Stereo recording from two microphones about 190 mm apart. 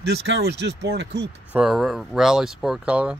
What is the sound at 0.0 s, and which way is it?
Speech, 60° right (ahead or behind).